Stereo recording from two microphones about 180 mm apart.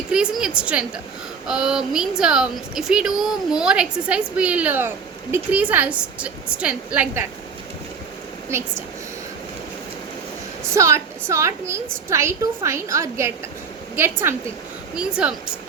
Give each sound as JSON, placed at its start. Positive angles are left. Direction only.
{"t": 0.1, "sound": "a woman's voice", "side_deg": -5}
{"t": 10.8, "sound": "a woman's voice", "side_deg": -15}